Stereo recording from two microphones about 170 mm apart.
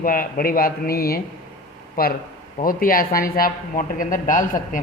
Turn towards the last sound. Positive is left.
turn(degrees=50)  # may be behind; listen again after turning